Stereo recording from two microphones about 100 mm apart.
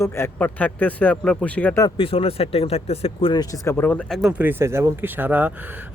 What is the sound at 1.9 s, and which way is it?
Speech, 65° left (ahead or behind).